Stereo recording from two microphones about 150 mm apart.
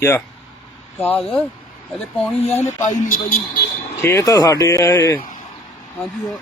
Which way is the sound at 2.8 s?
75° left (ahead or behind).